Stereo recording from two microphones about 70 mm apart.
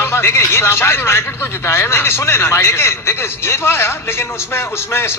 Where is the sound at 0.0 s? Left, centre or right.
Left.